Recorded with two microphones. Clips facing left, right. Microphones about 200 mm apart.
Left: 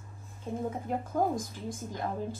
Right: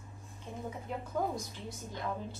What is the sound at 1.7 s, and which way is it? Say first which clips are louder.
Speech: left 6 dB; 50° left (ahead or behind).